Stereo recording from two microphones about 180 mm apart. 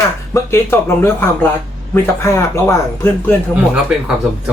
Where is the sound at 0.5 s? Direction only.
15° left (ahead or behind).